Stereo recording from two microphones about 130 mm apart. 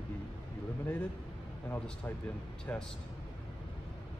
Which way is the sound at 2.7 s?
15° left (ahead or behind).